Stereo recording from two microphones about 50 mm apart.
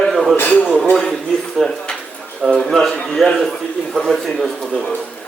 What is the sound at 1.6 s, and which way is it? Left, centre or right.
Speech, centre.